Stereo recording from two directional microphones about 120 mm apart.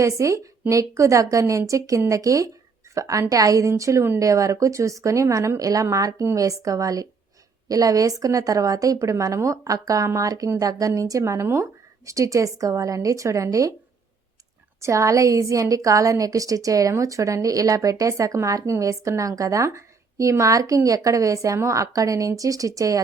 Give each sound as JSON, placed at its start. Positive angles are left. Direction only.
{"t": 0.0, "sound": "a woman's voice", "side_deg": -25}
{"t": 14.8, "sound": "a woman's voice", "side_deg": -25}